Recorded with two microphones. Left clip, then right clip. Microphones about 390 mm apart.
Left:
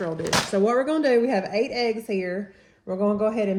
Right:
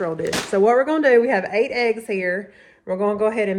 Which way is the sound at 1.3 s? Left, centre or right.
Right.